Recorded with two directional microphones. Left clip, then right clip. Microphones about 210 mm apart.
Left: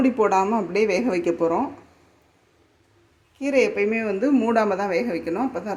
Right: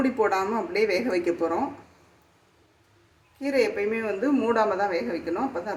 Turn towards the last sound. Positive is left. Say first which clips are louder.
# left 2 dB
turn(degrees=45)  # may be behind; listen again after turning